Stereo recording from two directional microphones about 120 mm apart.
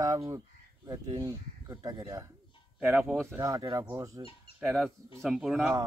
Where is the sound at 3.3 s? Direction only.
25° right (ahead or behind).